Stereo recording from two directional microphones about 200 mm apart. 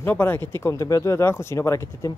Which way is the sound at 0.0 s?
10° left (ahead or behind).